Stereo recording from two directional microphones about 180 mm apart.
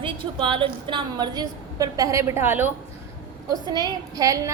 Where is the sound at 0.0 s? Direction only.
30° right (ahead or behind); by 2.7 s 10° right (ahead or behind).